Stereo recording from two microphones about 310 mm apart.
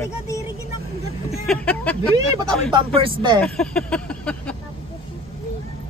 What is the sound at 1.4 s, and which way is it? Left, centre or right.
Speech, centre.